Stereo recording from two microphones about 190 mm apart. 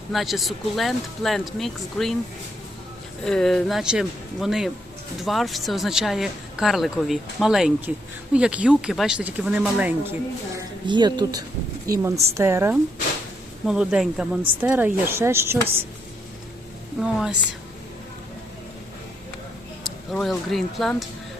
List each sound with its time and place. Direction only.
0.1 s speech: centre (ahead or behind)
3.2 s speech: 5° left (ahead or behind)
10.6 s a woman's voice: 25° right (ahead or behind)
17.0 s speech: 5° right (ahead or behind)
19.8 s speech: centre (ahead or behind)